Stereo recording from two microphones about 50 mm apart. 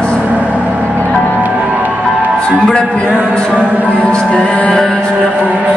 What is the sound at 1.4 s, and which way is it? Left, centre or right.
Music, right.